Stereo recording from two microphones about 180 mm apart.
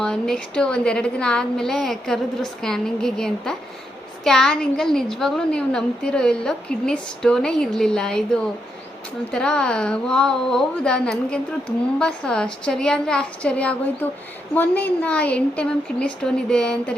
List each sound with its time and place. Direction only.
0.0 s a woman's voice: 5° left (ahead or behind)